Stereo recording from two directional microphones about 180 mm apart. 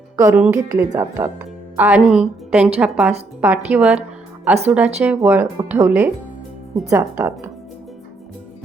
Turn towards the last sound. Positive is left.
turn(degrees=-10)  # may be behind; listen again after turning